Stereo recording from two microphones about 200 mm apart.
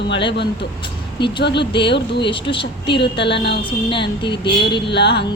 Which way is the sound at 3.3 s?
55° left (ahead or behind).